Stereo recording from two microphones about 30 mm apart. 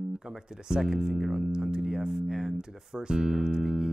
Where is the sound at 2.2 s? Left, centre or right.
Right.